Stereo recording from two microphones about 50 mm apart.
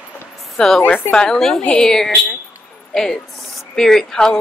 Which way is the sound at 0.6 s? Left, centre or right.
Centre.